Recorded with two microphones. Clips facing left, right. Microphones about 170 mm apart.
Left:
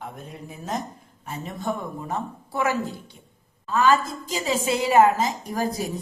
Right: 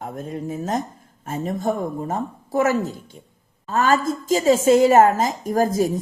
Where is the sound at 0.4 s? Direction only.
45° right (ahead or behind).